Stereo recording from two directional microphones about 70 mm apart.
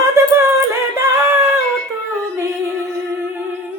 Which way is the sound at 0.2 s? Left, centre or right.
Right.